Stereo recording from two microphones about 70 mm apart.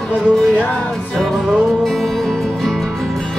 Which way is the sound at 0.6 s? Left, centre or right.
Centre.